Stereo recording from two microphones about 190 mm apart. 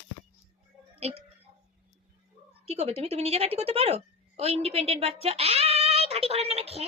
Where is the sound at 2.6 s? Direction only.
30° right (ahead or behind).